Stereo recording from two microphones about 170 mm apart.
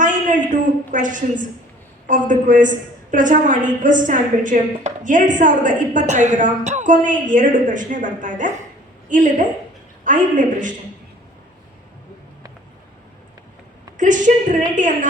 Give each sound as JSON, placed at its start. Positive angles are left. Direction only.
{"t": 0.0, "sound": "a sound", "side_deg": -50}
{"t": 2.0, "sound": "a woman's voice", "side_deg": -50}
{"t": 13.9, "sound": "a woman's voice", "side_deg": -50}